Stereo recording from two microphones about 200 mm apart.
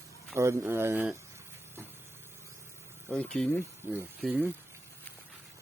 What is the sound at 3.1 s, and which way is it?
Speech, 5° left (ahead or behind).